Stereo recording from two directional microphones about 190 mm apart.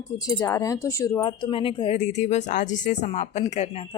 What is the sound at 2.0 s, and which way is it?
A woman's voice, 40° left (ahead or behind).